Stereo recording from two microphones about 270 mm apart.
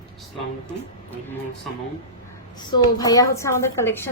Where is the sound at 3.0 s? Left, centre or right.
Centre.